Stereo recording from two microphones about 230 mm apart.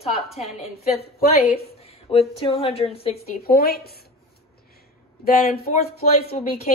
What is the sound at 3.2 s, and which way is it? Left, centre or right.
Speech, left.